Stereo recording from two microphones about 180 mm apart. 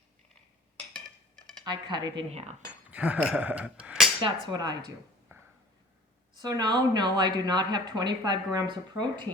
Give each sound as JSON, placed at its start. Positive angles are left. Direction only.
{"t": 1.6, "sound": "speech", "side_deg": -25}
{"t": 2.3, "sound": "cutlery", "side_deg": -35}
{"t": 2.9, "sound": "a sound", "side_deg": -10}
{"t": 4.2, "sound": "speech", "side_deg": -25}
{"t": 5.3, "sound": "a sound", "side_deg": -15}
{"t": 6.4, "sound": "speech", "side_deg": -25}